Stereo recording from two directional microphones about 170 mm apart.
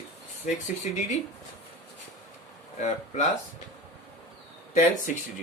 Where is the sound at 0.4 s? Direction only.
45° left (ahead or behind).